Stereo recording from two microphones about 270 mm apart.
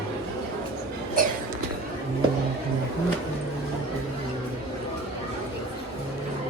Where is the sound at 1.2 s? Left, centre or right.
Right.